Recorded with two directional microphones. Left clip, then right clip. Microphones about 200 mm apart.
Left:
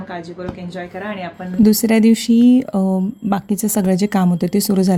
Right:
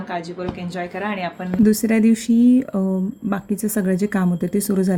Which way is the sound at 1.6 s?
45° left (ahead or behind).